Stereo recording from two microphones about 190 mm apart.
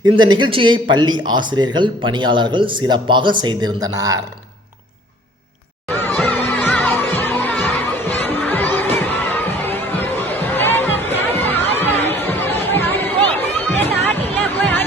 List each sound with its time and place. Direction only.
0.0 s speech: 25° right (ahead or behind)
6.0 s music: 10° left (ahead or behind)